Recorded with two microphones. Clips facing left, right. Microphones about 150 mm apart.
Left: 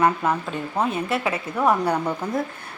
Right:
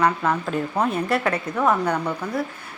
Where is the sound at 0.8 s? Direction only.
Centre (ahead or behind).